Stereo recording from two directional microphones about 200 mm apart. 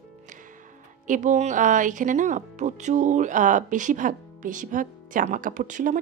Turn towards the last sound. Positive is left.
turn(degrees=-40)  # may be behind; listen again after turning